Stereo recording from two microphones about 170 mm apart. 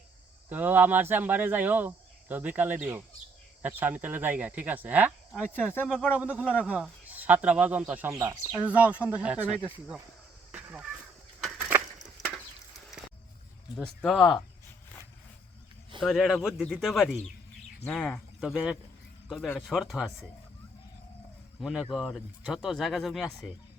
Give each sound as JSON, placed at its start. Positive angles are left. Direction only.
{"t": 0.5, "sound": "speech", "side_deg": -10}
{"t": 5.7, "sound": "speech", "side_deg": 10}
{"t": 6.1, "sound": "speech", "side_deg": -10}
{"t": 8.1, "sound": "speech", "side_deg": -20}
{"t": 9.0, "sound": "speech", "side_deg": -5}
{"t": 10.5, "sound": "a sound", "side_deg": -10}
{"t": 13.7, "sound": "speech", "side_deg": 0}
{"t": 16.0, "sound": "speech", "side_deg": 0}
{"t": 21.6, "sound": "speech", "side_deg": -5}